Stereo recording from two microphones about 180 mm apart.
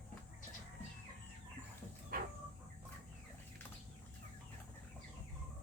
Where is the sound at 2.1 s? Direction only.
55° right (ahead or behind).